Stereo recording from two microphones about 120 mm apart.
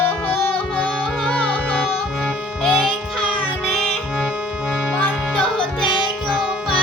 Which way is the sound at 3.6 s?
Centre (ahead or behind).